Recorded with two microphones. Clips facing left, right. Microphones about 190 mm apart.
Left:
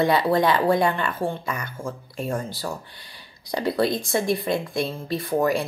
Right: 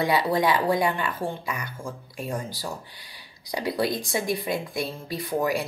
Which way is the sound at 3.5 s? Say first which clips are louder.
Left 3 dB; 15° right (ahead or behind).